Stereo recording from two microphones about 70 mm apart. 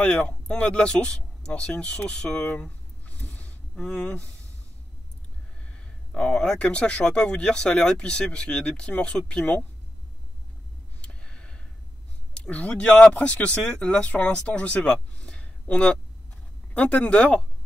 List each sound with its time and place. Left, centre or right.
0.0 s speech: centre
3.2 s a sound: left
3.7 s speech: centre
5.7 s speech: centre
11.0 s a sound: centre
12.4 s speech: left